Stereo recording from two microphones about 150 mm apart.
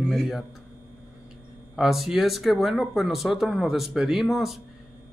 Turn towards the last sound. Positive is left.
turn(degrees=0)  # may be behind; listen again after turning